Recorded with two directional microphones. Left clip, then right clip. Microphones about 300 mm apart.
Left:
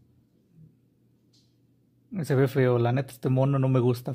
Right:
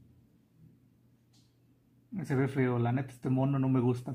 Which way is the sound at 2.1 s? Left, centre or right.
Left.